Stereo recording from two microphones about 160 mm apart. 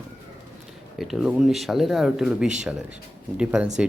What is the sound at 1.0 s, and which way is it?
Speech, centre (ahead or behind).